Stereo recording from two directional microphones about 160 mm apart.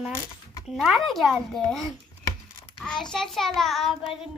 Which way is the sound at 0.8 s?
Centre (ahead or behind).